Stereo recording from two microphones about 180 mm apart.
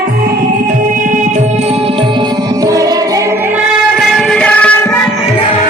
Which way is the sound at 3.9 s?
Centre (ahead or behind).